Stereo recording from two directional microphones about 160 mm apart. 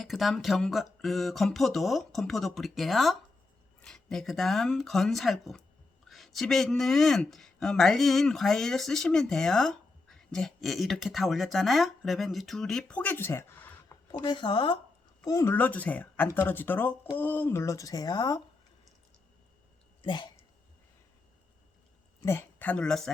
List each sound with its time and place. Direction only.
0.0 s speech: centre (ahead or behind)
14.1 s speech: 30° left (ahead or behind)
15.2 s speech: 20° left (ahead or behind)
20.0 s speech: 30° left (ahead or behind)
22.2 s speech: 15° left (ahead or behind)